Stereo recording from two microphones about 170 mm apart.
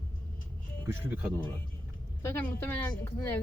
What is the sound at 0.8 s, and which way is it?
Speech, 10° right (ahead or behind).